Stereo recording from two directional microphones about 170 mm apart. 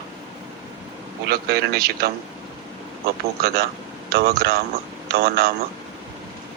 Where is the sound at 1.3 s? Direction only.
65° right (ahead or behind).